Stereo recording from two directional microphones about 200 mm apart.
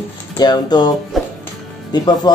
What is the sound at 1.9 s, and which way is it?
Speech, 20° left (ahead or behind).